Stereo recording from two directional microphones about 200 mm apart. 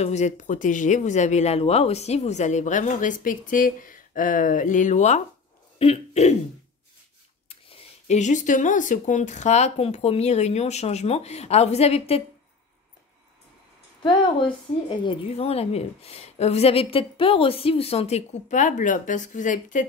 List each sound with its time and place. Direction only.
0.0 s speech: 35° left (ahead or behind)
5.8 s throat clearing: 30° left (ahead or behind)
7.4 s speech: 30° left (ahead or behind)
15.0 s speech: 30° left (ahead or behind)